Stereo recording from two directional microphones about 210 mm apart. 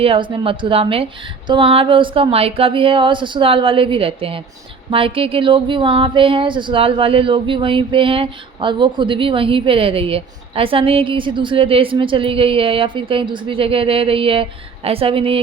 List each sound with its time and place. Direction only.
0.0 s speech: 25° right (ahead or behind)